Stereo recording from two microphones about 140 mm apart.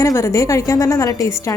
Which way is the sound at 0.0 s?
20° left (ahead or behind).